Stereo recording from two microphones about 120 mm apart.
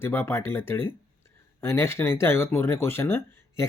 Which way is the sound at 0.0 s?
20° left (ahead or behind).